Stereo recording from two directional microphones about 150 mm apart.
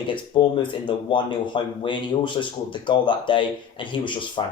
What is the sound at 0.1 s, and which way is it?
Speech, 35° left (ahead or behind).